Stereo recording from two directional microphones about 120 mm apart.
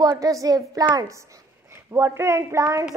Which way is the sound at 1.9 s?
20° right (ahead or behind).